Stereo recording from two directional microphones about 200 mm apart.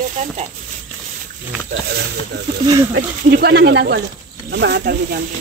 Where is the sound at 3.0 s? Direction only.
55° right (ahead or behind).